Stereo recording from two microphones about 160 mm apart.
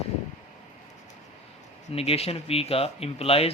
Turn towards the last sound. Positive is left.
turn(degrees=35)  # may be behind; listen again after turning